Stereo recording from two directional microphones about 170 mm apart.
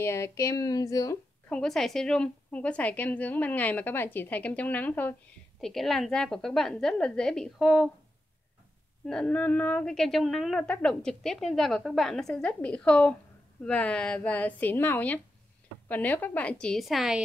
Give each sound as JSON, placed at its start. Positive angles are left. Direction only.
{"t": 0.0, "sound": "speech", "side_deg": 15}
{"t": 1.5, "sound": "a woman's voice", "side_deg": 5}
{"t": 9.0, "sound": "a woman's voice", "side_deg": 5}